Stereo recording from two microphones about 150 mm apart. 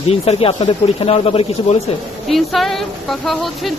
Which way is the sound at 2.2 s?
Centre (ahead or behind).